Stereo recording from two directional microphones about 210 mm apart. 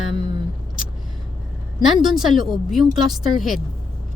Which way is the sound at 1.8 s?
Centre (ahead or behind).